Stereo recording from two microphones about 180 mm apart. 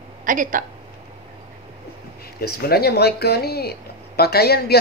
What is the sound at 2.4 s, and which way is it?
Speech, 60° left (ahead or behind).